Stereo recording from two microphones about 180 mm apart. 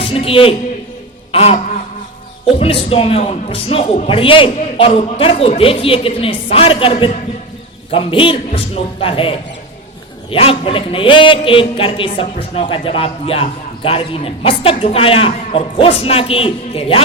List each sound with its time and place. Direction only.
0.0 s a man's voice: 30° left (ahead or behind)
1.3 s a sound: 35° left (ahead or behind)
2.6 s a man's voice: 30° left (ahead or behind)
10.3 s a man's voice: 30° left (ahead or behind)